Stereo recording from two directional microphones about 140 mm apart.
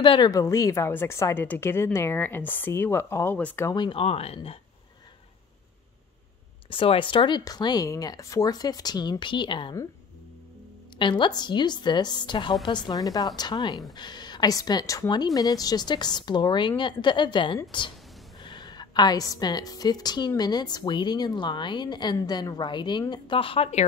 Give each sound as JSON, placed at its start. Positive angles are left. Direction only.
{"t": 0.0, "sound": "a woman's voice", "side_deg": 30}
{"t": 3.7, "sound": "speech", "side_deg": 35}
{"t": 6.7, "sound": "a woman's voice", "side_deg": 40}
{"t": 11.0, "sound": "a woman's voice", "side_deg": 35}